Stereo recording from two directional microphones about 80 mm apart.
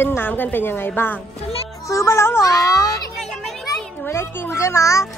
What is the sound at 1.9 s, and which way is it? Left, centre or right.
Speech, left.